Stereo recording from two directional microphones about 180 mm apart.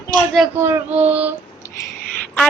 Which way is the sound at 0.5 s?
15° right (ahead or behind).